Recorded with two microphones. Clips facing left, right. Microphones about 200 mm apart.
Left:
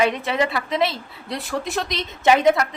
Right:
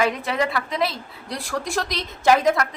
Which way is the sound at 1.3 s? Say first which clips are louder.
Left 2 dB; 20° left (ahead or behind).